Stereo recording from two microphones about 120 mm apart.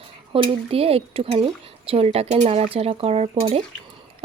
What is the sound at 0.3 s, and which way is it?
A woman's voice, 50° right (ahead or behind).